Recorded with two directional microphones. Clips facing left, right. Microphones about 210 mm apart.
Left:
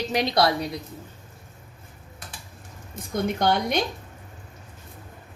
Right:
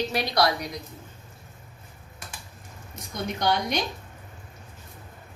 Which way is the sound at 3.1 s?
55° left (ahead or behind).